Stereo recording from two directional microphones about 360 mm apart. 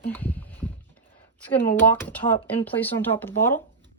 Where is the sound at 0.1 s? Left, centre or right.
Centre.